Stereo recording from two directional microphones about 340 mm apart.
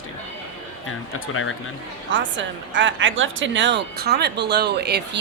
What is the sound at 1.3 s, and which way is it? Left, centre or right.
Speech, left.